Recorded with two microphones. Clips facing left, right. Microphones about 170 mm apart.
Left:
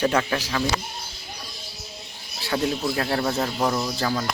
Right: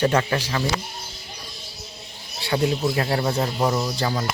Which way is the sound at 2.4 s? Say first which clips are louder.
Right 2 dB; 5° right (ahead or behind).